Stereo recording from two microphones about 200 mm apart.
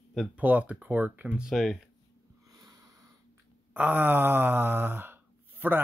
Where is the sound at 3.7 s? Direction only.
10° right (ahead or behind).